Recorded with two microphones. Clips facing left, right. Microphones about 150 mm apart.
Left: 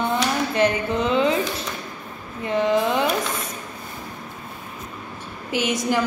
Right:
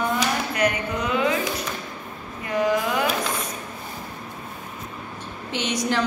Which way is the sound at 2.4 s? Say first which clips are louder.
Left 2 dB; 25° left (ahead or behind).